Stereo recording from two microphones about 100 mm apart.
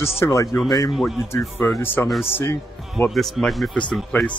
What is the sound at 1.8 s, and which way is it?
Speech, 25° left (ahead or behind).